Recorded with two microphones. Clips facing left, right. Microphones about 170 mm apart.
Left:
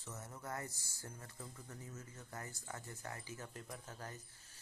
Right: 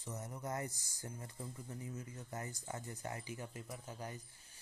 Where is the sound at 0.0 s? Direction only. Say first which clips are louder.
Right 4 dB; 15° right (ahead or behind).